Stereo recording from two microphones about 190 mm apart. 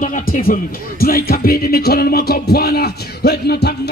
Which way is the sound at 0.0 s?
45° left (ahead or behind).